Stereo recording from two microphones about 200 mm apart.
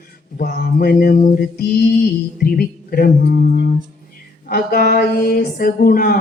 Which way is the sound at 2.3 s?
45° left (ahead or behind).